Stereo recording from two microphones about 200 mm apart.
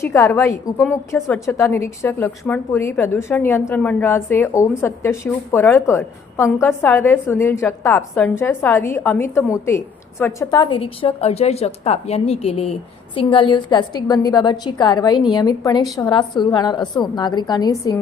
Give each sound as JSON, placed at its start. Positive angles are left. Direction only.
{"t": 0.0, "sound": "a woman's voice", "side_deg": 15}